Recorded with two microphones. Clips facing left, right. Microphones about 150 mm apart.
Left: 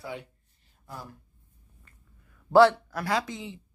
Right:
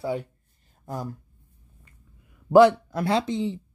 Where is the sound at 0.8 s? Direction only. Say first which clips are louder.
Right 9 dB; 45° right (ahead or behind).